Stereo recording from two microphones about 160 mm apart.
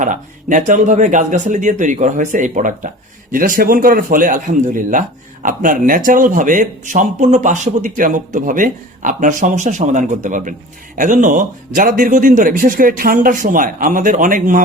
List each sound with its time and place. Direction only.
0.0 s speech: 55° right (ahead or behind)